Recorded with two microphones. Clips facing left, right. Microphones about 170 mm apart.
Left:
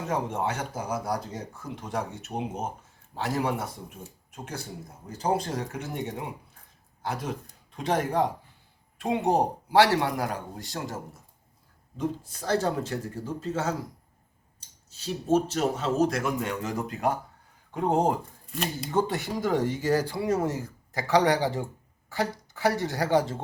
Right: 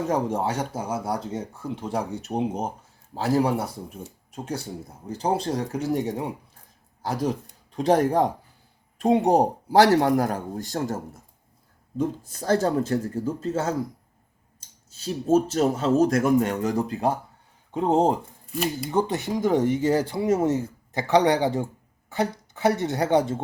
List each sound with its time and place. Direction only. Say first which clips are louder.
0.1 s a man's voice: right 1 dB; 40° right (ahead or behind)
15.0 s speech: right 4 dB; 40° right (ahead or behind); by 23.4 s 20° right (ahead or behind)